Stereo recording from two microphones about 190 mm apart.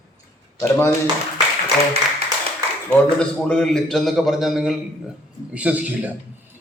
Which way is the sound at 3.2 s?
5° left (ahead or behind).